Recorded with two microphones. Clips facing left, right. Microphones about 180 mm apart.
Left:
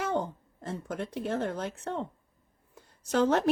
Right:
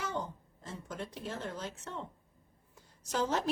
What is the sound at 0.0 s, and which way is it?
A woman's voice, 60° left (ahead or behind).